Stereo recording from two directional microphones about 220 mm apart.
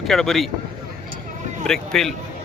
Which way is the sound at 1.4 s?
35° right (ahead or behind).